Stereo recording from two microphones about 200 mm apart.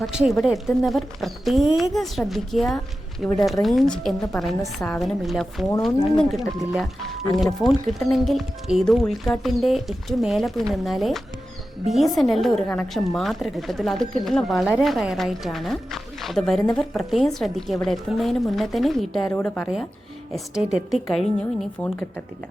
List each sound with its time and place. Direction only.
0.0 s speech: 5° right (ahead or behind)
6.7 s a woman's voice: centre (ahead or behind)
20.3 s speech: 5° right (ahead or behind)